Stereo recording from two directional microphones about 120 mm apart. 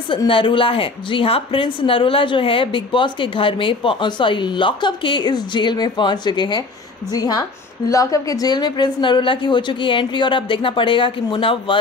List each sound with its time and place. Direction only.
0.3 s a woman's voice: 45° left (ahead or behind)